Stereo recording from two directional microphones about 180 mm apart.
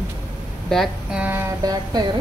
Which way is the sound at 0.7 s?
Centre (ahead or behind).